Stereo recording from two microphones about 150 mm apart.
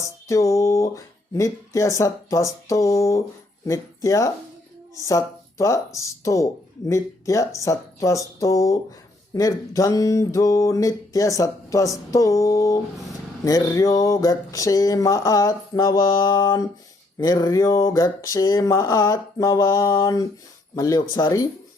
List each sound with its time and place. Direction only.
0.0 s speech: 20° left (ahead or behind)